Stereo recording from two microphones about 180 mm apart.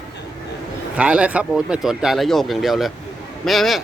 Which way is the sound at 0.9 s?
5° right (ahead or behind).